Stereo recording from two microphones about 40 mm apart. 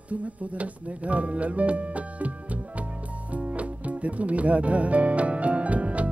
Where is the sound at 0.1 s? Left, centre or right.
Right.